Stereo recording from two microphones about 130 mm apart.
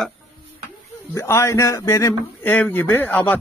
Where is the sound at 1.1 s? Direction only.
20° left (ahead or behind).